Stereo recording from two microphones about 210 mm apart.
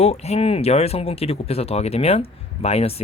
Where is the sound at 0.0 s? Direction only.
30° left (ahead or behind).